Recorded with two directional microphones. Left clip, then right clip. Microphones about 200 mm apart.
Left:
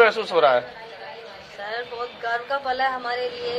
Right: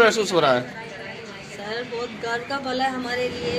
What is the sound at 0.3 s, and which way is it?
Speech, 30° left (ahead or behind).